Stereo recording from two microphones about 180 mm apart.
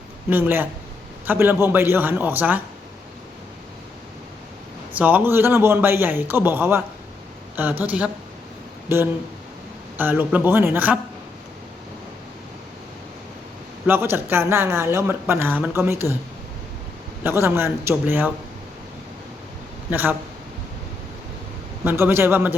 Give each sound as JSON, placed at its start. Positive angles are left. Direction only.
{"t": 0.3, "sound": "speech", "side_deg": -10}
{"t": 4.9, "sound": "speech", "side_deg": -10}
{"t": 10.0, "sound": "speech", "side_deg": -10}
{"t": 13.8, "sound": "speech", "side_deg": -10}
{"t": 17.2, "sound": "speech", "side_deg": -15}
{"t": 19.9, "sound": "speech", "side_deg": -10}
{"t": 21.8, "sound": "speech", "side_deg": -15}